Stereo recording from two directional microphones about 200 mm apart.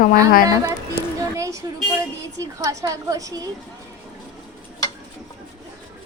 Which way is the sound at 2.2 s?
15° right (ahead or behind).